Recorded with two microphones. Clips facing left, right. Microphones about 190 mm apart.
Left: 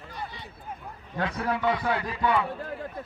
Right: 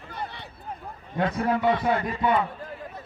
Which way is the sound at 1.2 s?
45° right (ahead or behind).